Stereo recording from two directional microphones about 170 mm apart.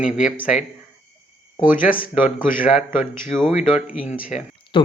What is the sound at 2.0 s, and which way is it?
Speech, 55° left (ahead or behind).